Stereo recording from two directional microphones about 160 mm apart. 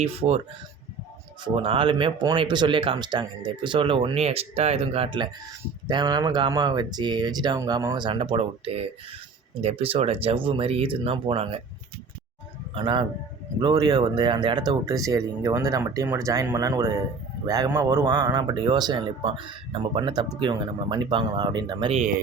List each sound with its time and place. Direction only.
0.0 s speech: 40° right (ahead or behind)
1.5 s a man's voice: 35° right (ahead or behind)
12.7 s a man's voice: 30° right (ahead or behind)